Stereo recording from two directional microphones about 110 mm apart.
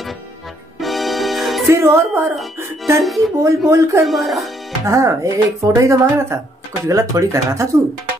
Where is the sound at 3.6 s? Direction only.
25° right (ahead or behind).